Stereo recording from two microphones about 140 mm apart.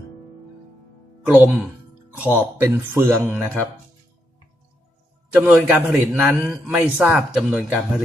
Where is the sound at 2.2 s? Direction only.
15° right (ahead or behind).